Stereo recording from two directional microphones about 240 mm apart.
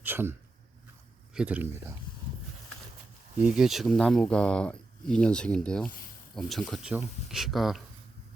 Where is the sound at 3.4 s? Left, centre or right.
Centre.